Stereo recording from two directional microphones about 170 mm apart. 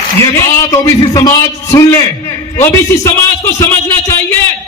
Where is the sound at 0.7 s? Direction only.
20° left (ahead or behind).